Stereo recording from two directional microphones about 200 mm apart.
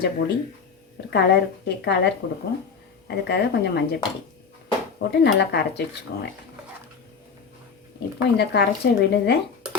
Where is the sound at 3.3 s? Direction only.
55° left (ahead or behind).